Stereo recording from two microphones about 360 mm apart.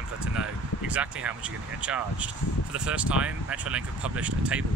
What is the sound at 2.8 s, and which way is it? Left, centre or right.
Speech, centre.